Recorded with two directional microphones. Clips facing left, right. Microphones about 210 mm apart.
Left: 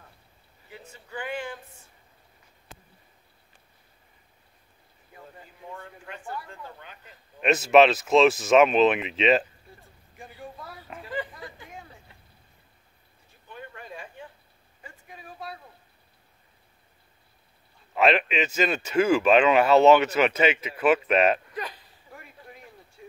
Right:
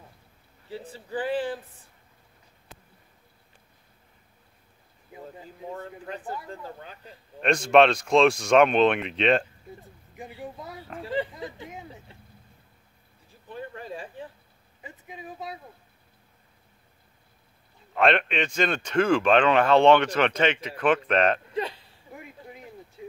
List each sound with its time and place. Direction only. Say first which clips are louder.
0.7 s speech: right 8 dB; 30° right (ahead or behind)
5.7 s speech: right 5 dB; 35° right (ahead or behind)
7.3 s speech: left 1 dB; 5° left (ahead or behind)
10.1 s speech: right 4 dB; 20° right (ahead or behind)
13.5 s speech: right 5 dB; 35° right (ahead or behind)
14.8 s speech: right 5 dB; 20° right (ahead or behind)
17.9 s speech: even; 5° left (ahead or behind)
21.5 s a sound: right 6 dB; 25° right (ahead or behind)